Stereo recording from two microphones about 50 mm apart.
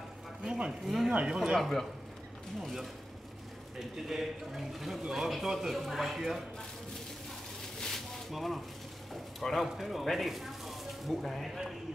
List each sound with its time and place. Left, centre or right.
0.4 s speech: right
0.8 s speech: centre
1.1 s speech: centre
1.6 s speech: centre
3.9 s speech: centre
7.8 s a sound: centre
9.7 s speech: centre